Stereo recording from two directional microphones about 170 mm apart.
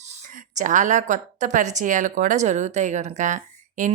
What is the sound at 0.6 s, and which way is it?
Speech, 50° right (ahead or behind).